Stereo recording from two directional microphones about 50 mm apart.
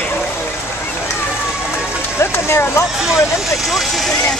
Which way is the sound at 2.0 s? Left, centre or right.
Left.